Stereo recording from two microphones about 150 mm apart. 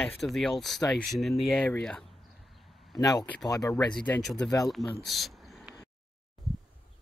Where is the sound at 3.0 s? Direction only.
25° left (ahead or behind).